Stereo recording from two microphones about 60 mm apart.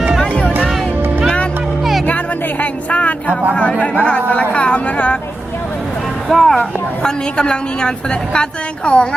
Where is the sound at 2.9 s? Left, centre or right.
Left.